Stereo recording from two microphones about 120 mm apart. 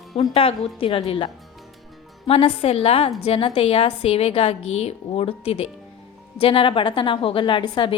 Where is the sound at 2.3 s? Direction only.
55° left (ahead or behind).